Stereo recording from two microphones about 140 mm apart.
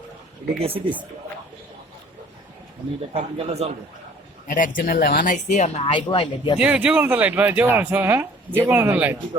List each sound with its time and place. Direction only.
0.6 s speech: 45° right (ahead or behind)
3.1 s speech: 45° right (ahead or behind)
4.4 s speech: 70° left (ahead or behind); by 6.6 s 35° left (ahead or behind)
6.6 s speech: 10° right (ahead or behind)